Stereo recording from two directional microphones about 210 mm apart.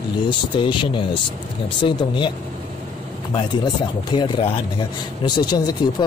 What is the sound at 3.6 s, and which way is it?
Speech, 20° left (ahead or behind).